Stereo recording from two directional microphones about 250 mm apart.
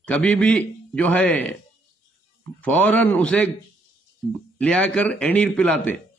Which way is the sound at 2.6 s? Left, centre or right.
Centre.